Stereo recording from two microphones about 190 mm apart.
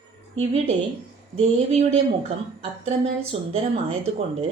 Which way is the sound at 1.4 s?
30° right (ahead or behind).